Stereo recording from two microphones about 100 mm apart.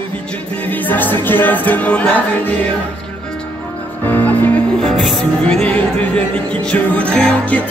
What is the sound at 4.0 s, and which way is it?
Music, 20° left (ahead or behind).